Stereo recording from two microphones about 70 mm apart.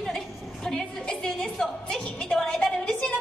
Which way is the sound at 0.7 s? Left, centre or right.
Centre.